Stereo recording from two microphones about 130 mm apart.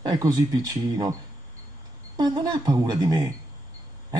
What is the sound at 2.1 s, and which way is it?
A woman's voice, 35° right (ahead or behind).